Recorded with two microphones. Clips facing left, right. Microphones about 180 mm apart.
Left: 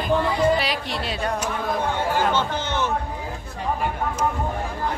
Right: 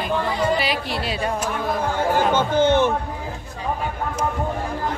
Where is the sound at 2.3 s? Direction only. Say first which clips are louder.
Right 7 dB; 55° right (ahead or behind).